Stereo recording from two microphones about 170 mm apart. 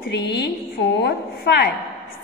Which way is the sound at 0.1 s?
85° left.